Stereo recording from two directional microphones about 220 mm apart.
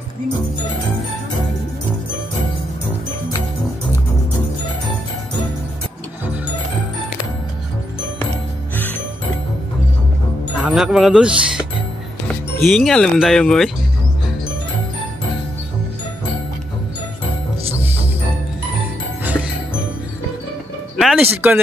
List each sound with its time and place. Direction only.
8.7 s music: 10° left (ahead or behind)
10.6 s speech: 5° right (ahead or behind)
12.6 s speech: centre (ahead or behind)
21.0 s speech: 5° right (ahead or behind)